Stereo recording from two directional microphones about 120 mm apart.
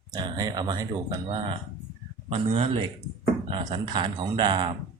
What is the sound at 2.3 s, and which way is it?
Speech, 50° right (ahead or behind).